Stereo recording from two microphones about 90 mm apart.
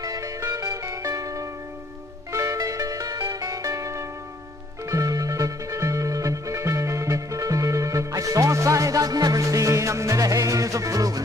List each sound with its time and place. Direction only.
0.0 s music: 40° right (ahead or behind)